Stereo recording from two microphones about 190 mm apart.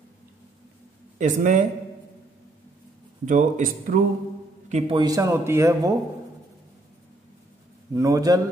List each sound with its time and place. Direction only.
1.1 s speech: 40° right (ahead or behind)
3.3 s a man's voice: 40° right (ahead or behind)
4.9 s speech: 20° right (ahead or behind)
7.9 s a man's voice: 20° right (ahead or behind)